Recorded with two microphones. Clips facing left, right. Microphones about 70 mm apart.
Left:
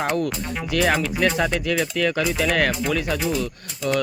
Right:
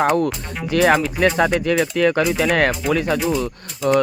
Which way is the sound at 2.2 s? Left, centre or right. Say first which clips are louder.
Right 4 dB; right.